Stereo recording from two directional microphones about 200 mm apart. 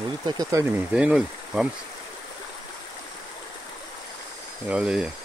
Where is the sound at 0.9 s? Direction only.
5° right (ahead or behind).